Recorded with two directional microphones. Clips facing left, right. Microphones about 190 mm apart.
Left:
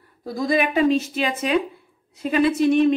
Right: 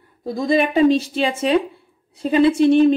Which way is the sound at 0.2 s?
25° right (ahead or behind).